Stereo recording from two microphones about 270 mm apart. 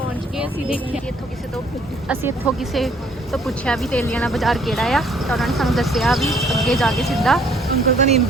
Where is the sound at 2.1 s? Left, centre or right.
Centre.